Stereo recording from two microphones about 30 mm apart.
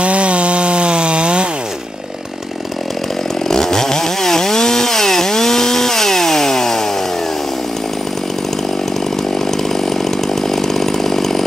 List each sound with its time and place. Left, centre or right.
0.0 s chainsaw: right
3.4 s chainsaw: centre
9.8 s chainsaw: centre